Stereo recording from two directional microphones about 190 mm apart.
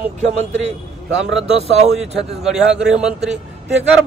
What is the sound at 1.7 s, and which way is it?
Speech, 35° right (ahead or behind).